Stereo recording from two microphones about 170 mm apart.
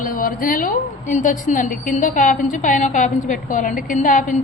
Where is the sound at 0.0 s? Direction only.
55° left (ahead or behind).